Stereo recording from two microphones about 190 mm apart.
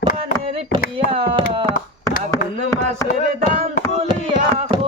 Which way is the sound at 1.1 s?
25° right (ahead or behind).